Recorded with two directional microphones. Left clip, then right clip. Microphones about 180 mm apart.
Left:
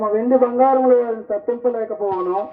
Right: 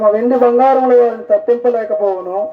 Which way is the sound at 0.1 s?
60° right (ahead or behind).